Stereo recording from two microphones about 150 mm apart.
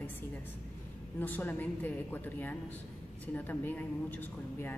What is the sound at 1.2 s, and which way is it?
A woman's voice, 10° left (ahead or behind).